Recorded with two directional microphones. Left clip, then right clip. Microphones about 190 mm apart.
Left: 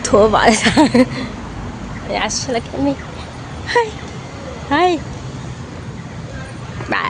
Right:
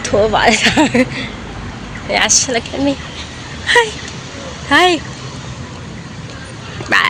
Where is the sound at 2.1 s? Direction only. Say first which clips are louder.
Right 6 dB; centre (ahead or behind).